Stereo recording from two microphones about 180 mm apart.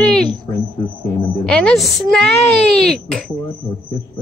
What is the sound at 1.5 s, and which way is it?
Speech, centre (ahead or behind).